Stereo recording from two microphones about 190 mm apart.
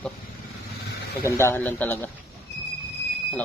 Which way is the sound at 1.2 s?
15° left (ahead or behind).